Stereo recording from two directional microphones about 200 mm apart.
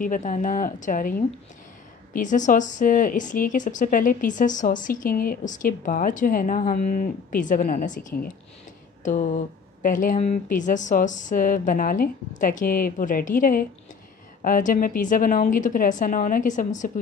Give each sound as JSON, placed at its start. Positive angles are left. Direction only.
{"t": 0.0, "sound": "a woman's voice", "side_deg": 40}